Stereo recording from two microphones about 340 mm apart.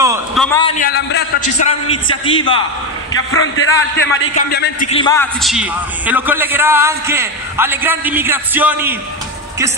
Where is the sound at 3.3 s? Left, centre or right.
Left; by 5.2 s centre.